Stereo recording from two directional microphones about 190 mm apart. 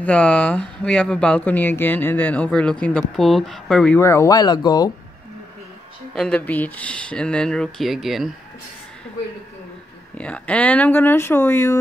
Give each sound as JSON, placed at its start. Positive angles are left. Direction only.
{"t": 0.0, "sound": "speech", "side_deg": 5}
{"t": 4.0, "sound": "speech", "side_deg": 15}
{"t": 6.1, "sound": "speech", "side_deg": 5}
{"t": 10.1, "sound": "speech", "side_deg": 5}